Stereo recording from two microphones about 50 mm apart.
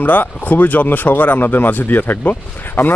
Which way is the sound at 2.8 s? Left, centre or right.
Left.